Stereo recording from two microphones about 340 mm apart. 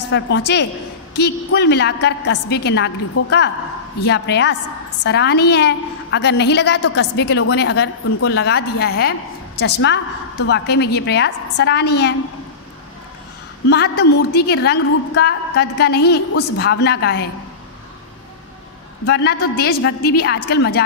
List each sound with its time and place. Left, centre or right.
0.1 s a woman's voice: left
13.7 s a woman's voice: left
19.0 s a woman's voice: left